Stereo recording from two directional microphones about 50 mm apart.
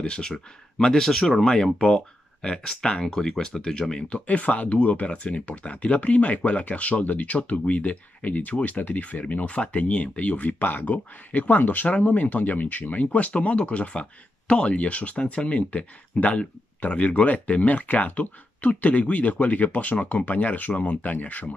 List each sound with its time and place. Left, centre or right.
0.0 s speech: centre